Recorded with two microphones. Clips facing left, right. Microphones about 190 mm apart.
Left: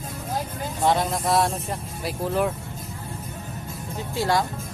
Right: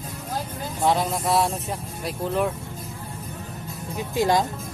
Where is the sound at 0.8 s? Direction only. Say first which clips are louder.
Even; centre (ahead or behind).